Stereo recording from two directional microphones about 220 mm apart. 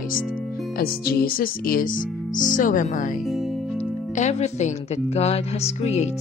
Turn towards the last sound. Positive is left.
turn(degrees=30)  # may be behind; listen again after turning